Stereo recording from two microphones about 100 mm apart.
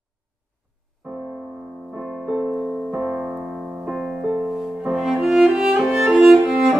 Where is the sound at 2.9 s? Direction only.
15° right (ahead or behind).